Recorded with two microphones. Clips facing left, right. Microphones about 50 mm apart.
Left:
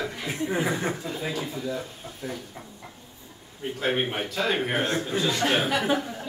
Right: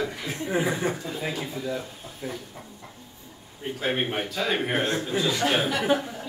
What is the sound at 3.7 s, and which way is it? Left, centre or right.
A man's voice, centre.